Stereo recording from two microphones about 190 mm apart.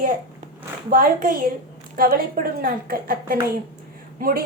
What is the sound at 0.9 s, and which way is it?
A woman's voice, 50° right (ahead or behind).